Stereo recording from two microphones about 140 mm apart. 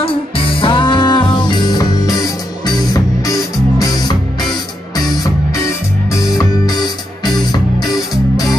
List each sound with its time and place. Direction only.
0.6 s music: 35° left (ahead or behind)